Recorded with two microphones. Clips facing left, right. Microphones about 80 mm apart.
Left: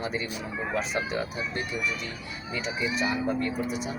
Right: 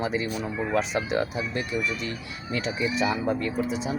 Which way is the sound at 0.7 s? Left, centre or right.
Right.